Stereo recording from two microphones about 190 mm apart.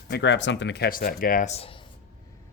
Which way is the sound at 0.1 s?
70° left (ahead or behind).